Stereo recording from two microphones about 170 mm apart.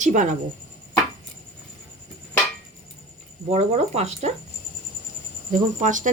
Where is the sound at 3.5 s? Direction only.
40° right (ahead or behind).